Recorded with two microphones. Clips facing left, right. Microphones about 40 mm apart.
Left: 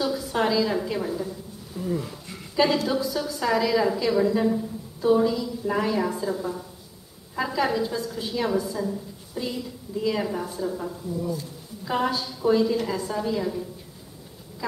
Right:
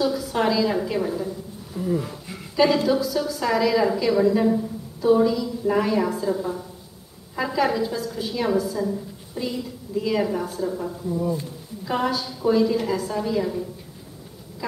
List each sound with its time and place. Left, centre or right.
0.0 s a woman's voice: centre
11.8 s a woman's voice: centre